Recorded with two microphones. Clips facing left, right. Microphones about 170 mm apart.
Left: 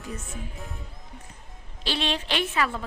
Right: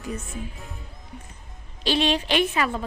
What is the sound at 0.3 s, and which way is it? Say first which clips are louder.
Speech: right 2 dB; centre (ahead or behind).